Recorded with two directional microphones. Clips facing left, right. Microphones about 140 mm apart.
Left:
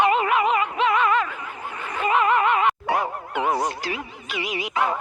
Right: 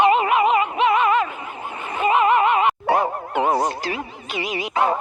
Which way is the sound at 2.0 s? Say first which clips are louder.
Right 3 dB; 20° right (ahead or behind).